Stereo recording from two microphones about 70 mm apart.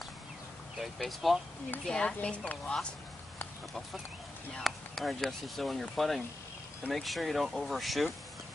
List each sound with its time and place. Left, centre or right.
0.7 s speech: centre
1.9 s speech: centre
4.6 s speech: centre